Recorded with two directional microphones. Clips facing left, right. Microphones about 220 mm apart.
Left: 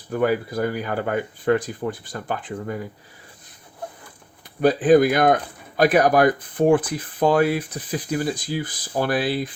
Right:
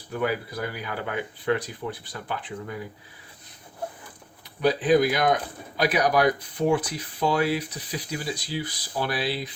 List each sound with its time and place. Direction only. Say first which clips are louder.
0.2 s speech: left 6 dB; 45° left (ahead or behind)
4.6 s speech: left 5 dB; 50° left (ahead or behind)